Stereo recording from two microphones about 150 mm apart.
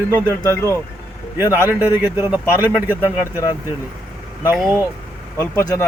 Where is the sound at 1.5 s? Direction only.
10° right (ahead or behind).